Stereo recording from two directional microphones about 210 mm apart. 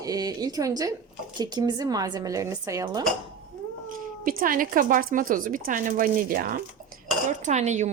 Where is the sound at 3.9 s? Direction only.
40° right (ahead or behind).